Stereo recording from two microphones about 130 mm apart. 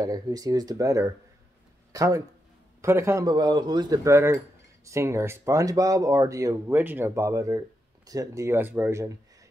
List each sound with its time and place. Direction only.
0.0 s speech: 30° right (ahead or behind)